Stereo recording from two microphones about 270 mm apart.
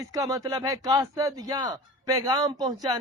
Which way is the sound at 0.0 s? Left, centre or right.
Centre.